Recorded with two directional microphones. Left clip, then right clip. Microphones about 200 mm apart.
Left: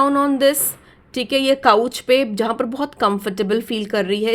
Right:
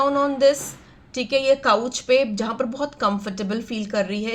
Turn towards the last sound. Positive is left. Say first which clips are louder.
# left 5 dB
turn(degrees=50)  # may be behind; listen again after turning